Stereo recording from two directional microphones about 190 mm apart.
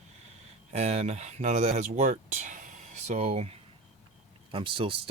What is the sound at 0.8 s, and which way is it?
Speech, 35° right (ahead or behind).